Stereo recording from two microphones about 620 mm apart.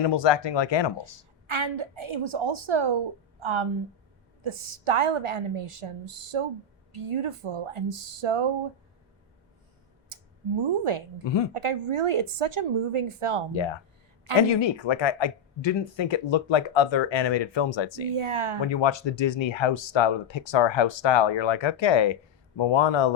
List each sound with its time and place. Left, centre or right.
0.0 s speech: left
1.5 s a woman's voice: right
10.1 s a sound: right
11.2 s speech: left
11.5 s a woman's voice: right
13.5 s speech: left
18.1 s a woman's voice: right
18.7 s speech: left